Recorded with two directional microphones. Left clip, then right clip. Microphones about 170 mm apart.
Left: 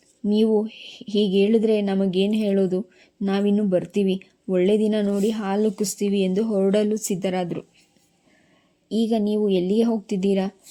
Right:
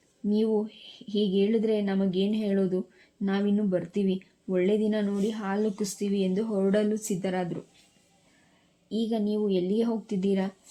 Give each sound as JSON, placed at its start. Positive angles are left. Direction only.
{"t": 0.3, "sound": "speech", "side_deg": 15}
{"t": 8.9, "sound": "a woman's voice", "side_deg": 20}